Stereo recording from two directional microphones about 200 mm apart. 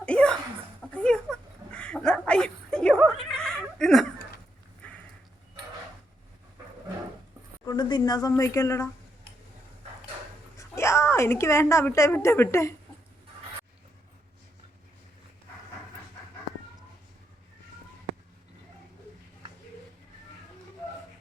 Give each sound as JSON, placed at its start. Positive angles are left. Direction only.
{"t": 0.0, "sound": "chuckle", "side_deg": 5}
{"t": 0.8, "sound": "a sound", "side_deg": 5}
{"t": 4.8, "sound": "dog", "side_deg": 5}
{"t": 7.6, "sound": "speech", "side_deg": 20}
{"t": 10.6, "sound": "a woman's voice", "side_deg": 15}